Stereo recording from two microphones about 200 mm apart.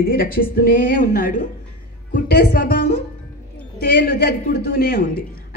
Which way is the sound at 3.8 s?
50° left (ahead or behind).